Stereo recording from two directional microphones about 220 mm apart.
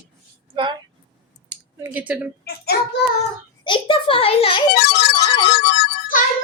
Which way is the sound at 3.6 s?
20° left (ahead or behind).